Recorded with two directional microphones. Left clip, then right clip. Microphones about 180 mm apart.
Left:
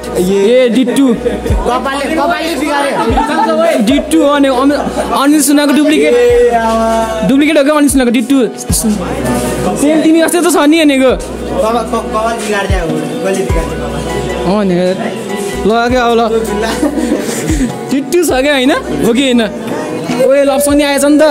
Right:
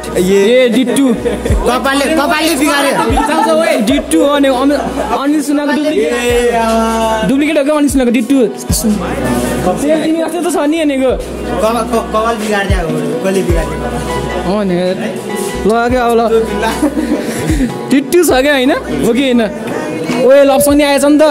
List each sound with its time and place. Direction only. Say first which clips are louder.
0.5 s speech: left 1 dB; centre (ahead or behind)
1.7 s speech: right 2 dB; 65° right (ahead or behind)
3.8 s speech: left 1 dB; 5° left (ahead or behind)
5.2 s speech: left 4 dB; 20° left (ahead or behind)
7.2 s speech: left 3 dB; 10° left (ahead or behind)
10.3 s speech: left 5 dB; 20° left (ahead or behind)
14.5 s speech: left 2 dB; 10° left (ahead or behind)
15.6 s speech: left 1 dB; centre (ahead or behind)
17.9 s speech: right 2 dB; 10° right (ahead or behind)
20.3 s speech: right 2 dB; 10° right (ahead or behind)